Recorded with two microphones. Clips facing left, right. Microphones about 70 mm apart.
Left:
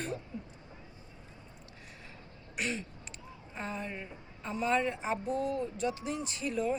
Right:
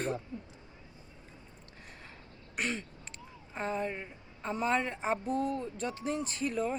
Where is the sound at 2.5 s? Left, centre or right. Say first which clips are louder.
Right 1 dB; right.